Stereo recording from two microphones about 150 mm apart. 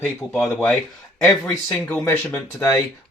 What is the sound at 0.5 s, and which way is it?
Speech, 5° left (ahead or behind).